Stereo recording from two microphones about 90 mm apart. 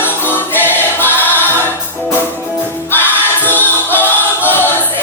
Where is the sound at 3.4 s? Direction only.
20° left (ahead or behind).